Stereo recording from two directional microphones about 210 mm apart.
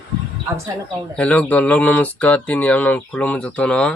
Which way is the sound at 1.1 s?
5° left (ahead or behind).